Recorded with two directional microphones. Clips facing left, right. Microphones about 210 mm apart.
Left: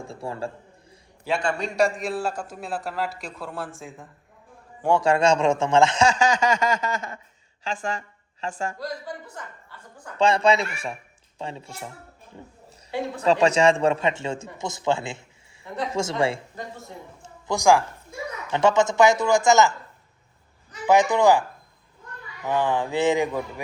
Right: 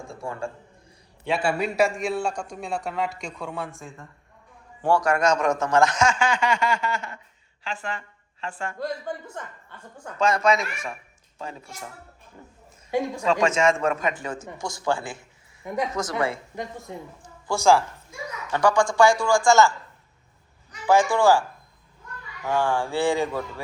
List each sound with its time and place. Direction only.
0.1 s a man's voice: 30° left (ahead or behind)
1.4 s a man's voice: 5° right (ahead or behind)
4.9 s a man's voice: 30° left (ahead or behind)
8.8 s a man's voice: 25° right (ahead or behind)
10.2 s a man's voice: 30° left (ahead or behind)
13.2 s a man's voice: 35° left (ahead or behind)
17.2 s a man's voice: 15° left (ahead or behind)
20.8 s a man's voice: 20° left (ahead or behind)
22.4 s a man's voice: 20° left (ahead or behind)